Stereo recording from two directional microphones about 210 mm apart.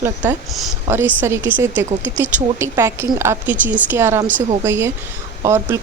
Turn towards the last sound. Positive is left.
turn(degrees=-15)  # may be behind; listen again after turning